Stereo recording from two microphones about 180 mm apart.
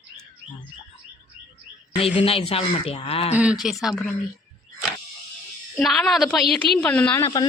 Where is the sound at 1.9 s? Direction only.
35° left (ahead or behind).